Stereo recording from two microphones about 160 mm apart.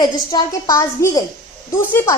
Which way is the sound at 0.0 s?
25° left (ahead or behind).